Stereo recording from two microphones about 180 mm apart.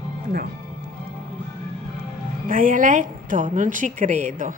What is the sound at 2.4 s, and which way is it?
A woman's voice, 50° right (ahead or behind).